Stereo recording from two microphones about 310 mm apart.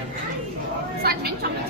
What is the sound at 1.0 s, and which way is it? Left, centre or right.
Speech, right.